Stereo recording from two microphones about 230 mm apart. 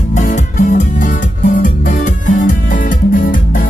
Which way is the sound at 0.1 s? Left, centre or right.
Left.